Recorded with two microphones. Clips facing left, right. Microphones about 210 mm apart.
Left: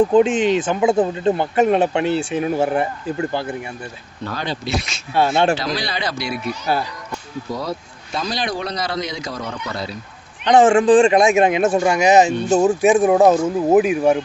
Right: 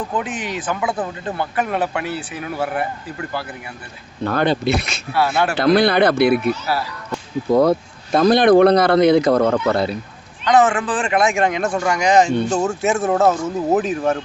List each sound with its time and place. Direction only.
0.1 s speech: 25° left (ahead or behind)
4.2 s speech: 55° right (ahead or behind)
5.1 s speech: 25° left (ahead or behind)
5.5 s speech: 55° right (ahead or behind)
7.5 s speech: 55° right (ahead or behind)
10.4 s speech: 25° left (ahead or behind)